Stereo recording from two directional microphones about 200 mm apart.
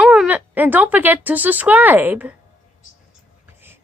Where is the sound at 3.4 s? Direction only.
10° right (ahead or behind).